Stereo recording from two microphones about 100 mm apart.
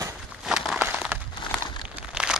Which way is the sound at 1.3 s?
50° left (ahead or behind).